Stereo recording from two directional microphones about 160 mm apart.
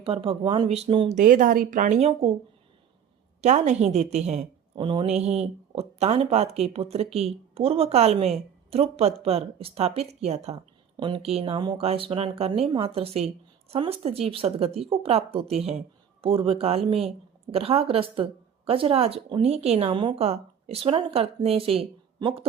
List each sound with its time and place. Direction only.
0.0 s a woman's voice: 35° right (ahead or behind)
1.1 s speech: 55° right (ahead or behind)
3.4 s speech: 45° right (ahead or behind)
4.7 s a woman's voice: 30° right (ahead or behind)